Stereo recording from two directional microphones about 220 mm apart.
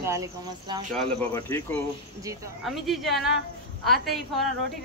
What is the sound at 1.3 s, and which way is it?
Speech, 10° left (ahead or behind).